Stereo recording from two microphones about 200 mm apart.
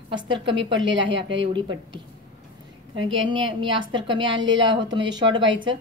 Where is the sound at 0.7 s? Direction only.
70° right (ahead or behind).